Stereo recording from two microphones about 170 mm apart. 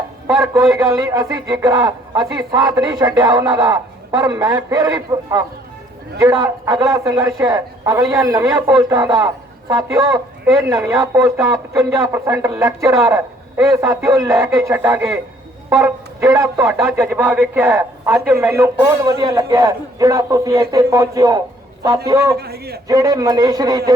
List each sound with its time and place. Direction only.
0.7 s a man's voice: 20° right (ahead or behind)
22.4 s a man's voice: 65° right (ahead or behind)
22.9 s speech: 20° right (ahead or behind)